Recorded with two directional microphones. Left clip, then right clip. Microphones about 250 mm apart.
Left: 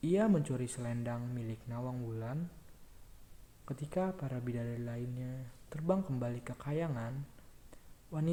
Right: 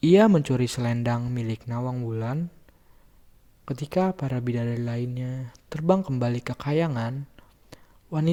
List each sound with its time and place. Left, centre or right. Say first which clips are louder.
0.0 s speech: right 14 dB; right
3.7 s speech: right 11 dB; right
7.7 s a sound: right 12 dB; right